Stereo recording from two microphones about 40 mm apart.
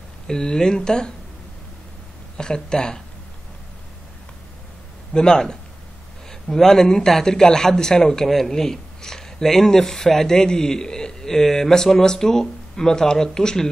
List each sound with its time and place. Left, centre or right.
0.3 s a man's voice: centre
2.3 s speech: centre
5.1 s a man's voice: centre